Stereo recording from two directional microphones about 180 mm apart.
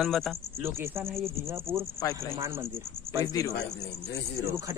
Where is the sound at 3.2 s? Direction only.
20° left (ahead or behind).